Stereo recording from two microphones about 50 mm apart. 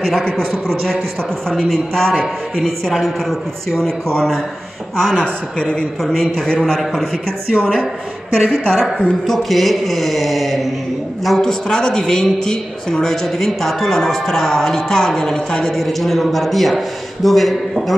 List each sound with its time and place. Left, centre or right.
0.5 s a man's voice: centre
5.1 s speech: centre
6.0 s a man's voice: centre
8.4 s a woman's voice: centre